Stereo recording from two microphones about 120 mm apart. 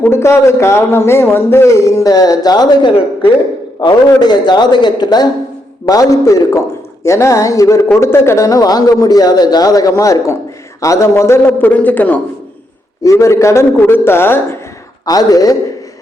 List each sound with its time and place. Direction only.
0.0 s a man's voice: 20° left (ahead or behind)
13.0 s speech: 25° left (ahead or behind)
15.0 s a man's voice: 30° left (ahead or behind)